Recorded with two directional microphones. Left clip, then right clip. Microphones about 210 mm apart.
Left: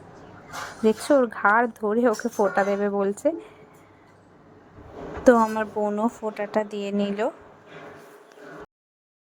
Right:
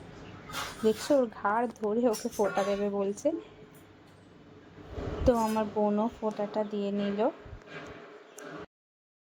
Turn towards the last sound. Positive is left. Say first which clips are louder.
# left 4 dB
turn(degrees=25)  # may be behind; listen again after turning